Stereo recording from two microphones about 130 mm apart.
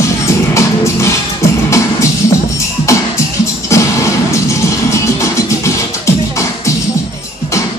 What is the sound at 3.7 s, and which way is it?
Music, 20° left (ahead or behind).